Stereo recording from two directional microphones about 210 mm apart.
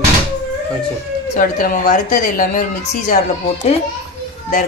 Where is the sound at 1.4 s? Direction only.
45° left (ahead or behind).